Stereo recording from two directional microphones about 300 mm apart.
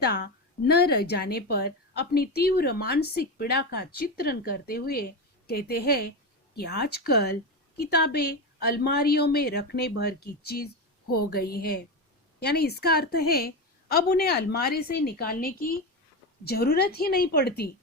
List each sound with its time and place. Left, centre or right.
0.6 s a woman's voice: left